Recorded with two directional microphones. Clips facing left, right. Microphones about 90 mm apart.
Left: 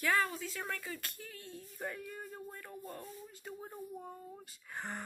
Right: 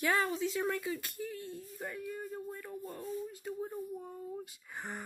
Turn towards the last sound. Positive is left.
turn(degrees=-10)  # may be behind; listen again after turning